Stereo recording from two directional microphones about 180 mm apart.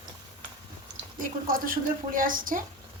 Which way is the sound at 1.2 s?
50° right (ahead or behind).